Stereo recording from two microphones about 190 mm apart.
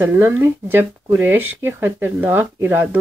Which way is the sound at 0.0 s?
10° right (ahead or behind).